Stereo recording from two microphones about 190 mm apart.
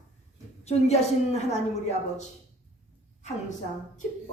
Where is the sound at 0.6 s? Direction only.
35° left (ahead or behind).